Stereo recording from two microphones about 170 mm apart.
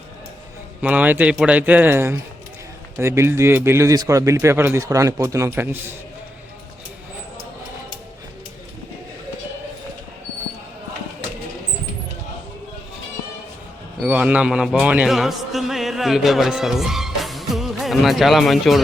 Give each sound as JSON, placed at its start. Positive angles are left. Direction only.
{"t": 0.8, "sound": "a man's voice", "side_deg": -10}
{"t": 14.0, "sound": "a man's voice", "side_deg": -10}